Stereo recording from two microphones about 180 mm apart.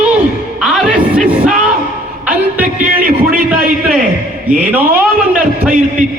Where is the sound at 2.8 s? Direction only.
50° right (ahead or behind).